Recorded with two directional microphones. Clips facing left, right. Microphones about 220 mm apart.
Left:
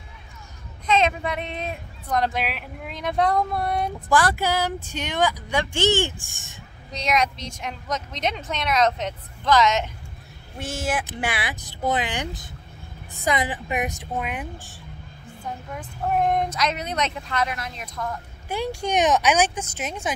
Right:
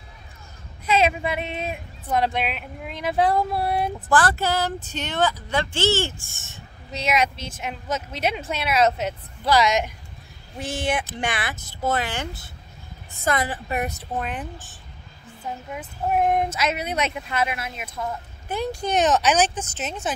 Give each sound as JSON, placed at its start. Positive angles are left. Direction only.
{"t": 0.8, "sound": "speech", "side_deg": -10}
{"t": 4.1, "sound": "speech", "side_deg": 10}
{"t": 6.9, "sound": "a woman's voice", "side_deg": -5}
{"t": 10.6, "sound": "speech", "side_deg": 0}
{"t": 15.7, "sound": "a woman's voice", "side_deg": -10}
{"t": 18.5, "sound": "speech", "side_deg": 10}